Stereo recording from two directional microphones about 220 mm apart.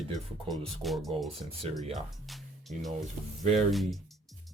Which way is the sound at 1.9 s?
Centre (ahead or behind).